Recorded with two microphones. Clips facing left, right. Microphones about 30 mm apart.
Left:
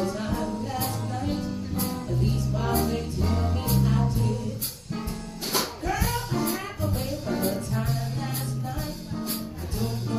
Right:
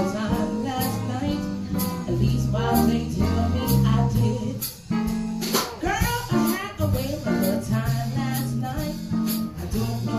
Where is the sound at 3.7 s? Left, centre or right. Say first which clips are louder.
Right 1 dB; right.